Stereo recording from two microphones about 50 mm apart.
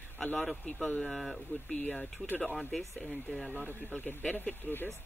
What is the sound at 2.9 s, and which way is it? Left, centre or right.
Speech, centre.